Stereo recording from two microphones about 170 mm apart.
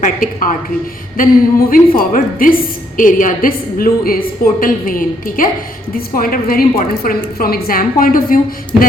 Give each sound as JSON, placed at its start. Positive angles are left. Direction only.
{"t": 0.0, "sound": "a woman's voice", "side_deg": 55}